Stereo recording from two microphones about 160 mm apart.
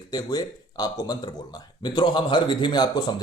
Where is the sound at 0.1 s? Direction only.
25° left (ahead or behind).